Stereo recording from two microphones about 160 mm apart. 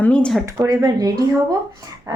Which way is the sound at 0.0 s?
5° left (ahead or behind).